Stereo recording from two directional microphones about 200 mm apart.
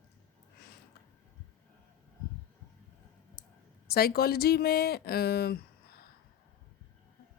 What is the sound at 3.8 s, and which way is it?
Speech, 50° left (ahead or behind).